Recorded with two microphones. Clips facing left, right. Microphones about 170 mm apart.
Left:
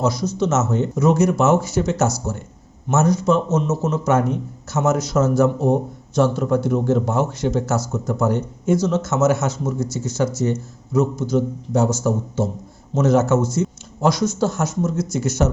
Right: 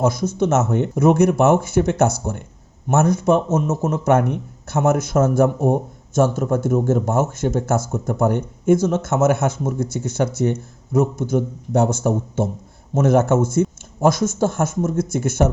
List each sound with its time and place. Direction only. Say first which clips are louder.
0.0 s a man's voice: right 1 dB; 50° right (ahead or behind)